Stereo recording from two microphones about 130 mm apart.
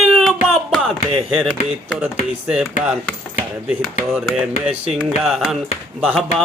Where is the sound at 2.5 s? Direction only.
10° right (ahead or behind).